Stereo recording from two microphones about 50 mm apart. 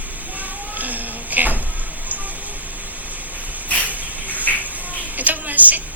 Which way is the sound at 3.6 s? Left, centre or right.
Left.